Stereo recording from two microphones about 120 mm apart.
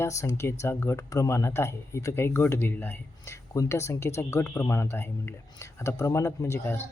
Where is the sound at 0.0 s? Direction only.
25° left (ahead or behind).